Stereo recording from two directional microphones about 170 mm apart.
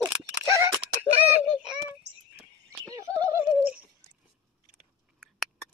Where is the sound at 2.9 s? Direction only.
20° right (ahead or behind).